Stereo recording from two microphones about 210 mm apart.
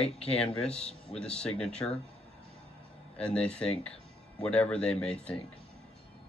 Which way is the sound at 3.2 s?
5° left (ahead or behind).